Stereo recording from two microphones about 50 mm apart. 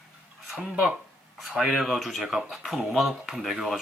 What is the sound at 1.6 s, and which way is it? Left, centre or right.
Speech, centre.